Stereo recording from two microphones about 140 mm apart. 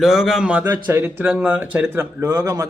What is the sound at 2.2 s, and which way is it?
Speech, 25° right (ahead or behind).